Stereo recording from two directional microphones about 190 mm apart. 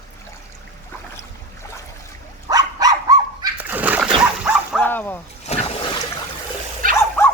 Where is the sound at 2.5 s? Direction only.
20° right (ahead or behind).